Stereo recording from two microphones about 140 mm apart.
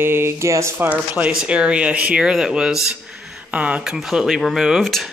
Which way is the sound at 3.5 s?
10° right (ahead or behind).